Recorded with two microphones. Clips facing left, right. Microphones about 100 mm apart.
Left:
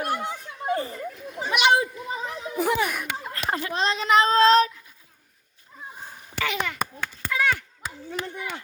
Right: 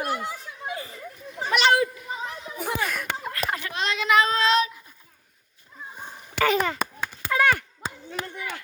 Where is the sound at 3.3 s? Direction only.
30° left (ahead or behind).